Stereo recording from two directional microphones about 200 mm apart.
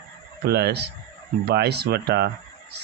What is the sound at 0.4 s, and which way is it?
Speech, 55° right (ahead or behind).